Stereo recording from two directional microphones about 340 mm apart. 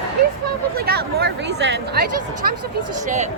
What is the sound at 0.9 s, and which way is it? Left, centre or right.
Speech, right.